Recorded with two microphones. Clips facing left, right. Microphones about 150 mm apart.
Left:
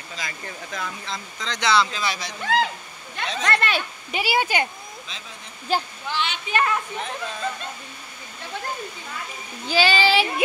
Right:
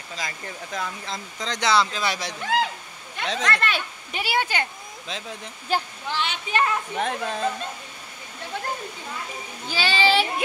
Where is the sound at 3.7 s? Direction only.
5° left (ahead or behind).